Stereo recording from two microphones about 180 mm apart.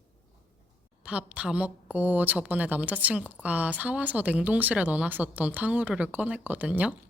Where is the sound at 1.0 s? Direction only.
5° right (ahead or behind).